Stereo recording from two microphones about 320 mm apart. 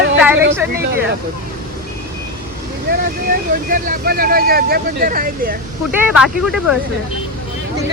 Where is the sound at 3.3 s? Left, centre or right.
Right.